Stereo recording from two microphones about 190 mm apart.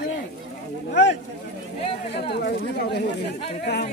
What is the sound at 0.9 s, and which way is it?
Speech, 65° left (ahead or behind).